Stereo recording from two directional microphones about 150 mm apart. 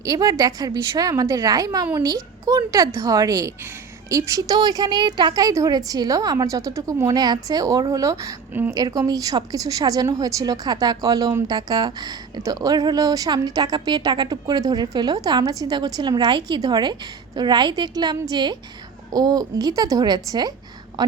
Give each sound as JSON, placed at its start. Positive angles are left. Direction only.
{"t": 0.0, "sound": "a woman's voice", "side_deg": -25}